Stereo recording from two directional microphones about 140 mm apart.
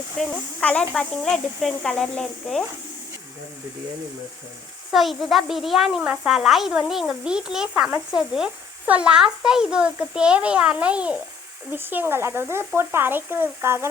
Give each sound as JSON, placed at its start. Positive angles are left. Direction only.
{"t": 0.2, "sound": "speech", "side_deg": 10}
{"t": 4.9, "sound": "a child's voice", "side_deg": 0}